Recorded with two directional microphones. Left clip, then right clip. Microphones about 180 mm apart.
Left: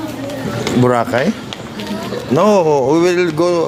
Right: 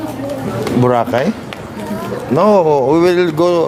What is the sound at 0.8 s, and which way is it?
Speech, 5° right (ahead or behind).